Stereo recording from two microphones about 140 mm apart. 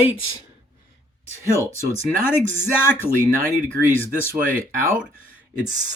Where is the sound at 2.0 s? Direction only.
15° left (ahead or behind).